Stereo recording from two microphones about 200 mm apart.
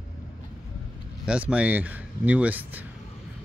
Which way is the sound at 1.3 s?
5° right (ahead or behind).